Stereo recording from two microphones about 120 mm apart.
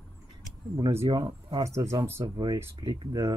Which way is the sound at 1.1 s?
35° right (ahead or behind).